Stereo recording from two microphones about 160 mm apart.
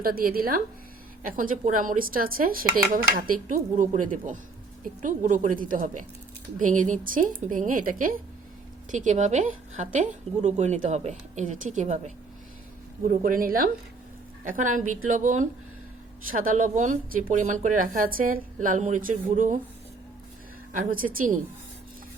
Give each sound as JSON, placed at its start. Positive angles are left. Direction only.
{"t": 0.0, "sound": "a woman's voice", "side_deg": -65}
{"t": 13.1, "sound": "a woman's voice", "side_deg": -65}
{"t": 20.7, "sound": "speech", "side_deg": -60}